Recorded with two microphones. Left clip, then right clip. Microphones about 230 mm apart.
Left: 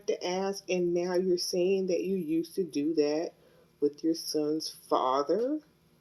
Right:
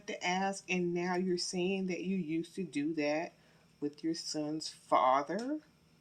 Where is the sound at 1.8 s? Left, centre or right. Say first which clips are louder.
Left 10 dB; right.